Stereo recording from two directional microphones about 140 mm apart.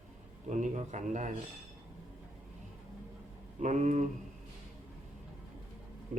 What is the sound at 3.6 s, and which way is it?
Speech, 60° right (ahead or behind).